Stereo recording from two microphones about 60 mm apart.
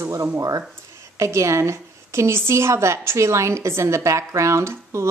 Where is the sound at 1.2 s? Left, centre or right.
Right.